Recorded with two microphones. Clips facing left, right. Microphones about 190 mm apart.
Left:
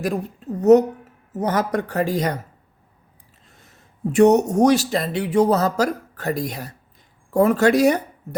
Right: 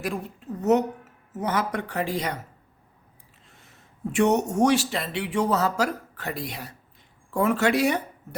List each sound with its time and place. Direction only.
0.0 s speech: 40° left (ahead or behind)
3.5 s a man's voice: 40° left (ahead or behind)